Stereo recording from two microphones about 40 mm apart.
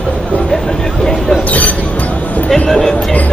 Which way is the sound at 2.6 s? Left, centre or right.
Centre.